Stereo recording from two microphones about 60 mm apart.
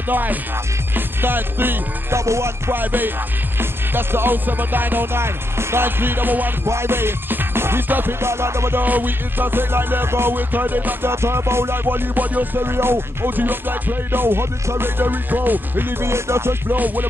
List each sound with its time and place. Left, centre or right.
0.1 s music: right
2.1 s music: right
2.7 s music: right
6.7 s music: right
8.8 s music: right
11.1 s music: right
16.7 s music: right